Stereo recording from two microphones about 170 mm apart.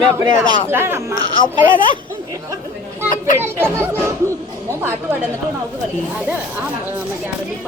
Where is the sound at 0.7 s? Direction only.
15° right (ahead or behind).